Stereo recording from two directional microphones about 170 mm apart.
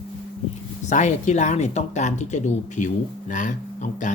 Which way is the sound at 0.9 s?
45° left (ahead or behind).